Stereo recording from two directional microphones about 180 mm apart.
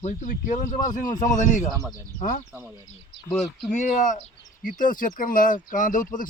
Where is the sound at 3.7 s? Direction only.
45° left (ahead or behind).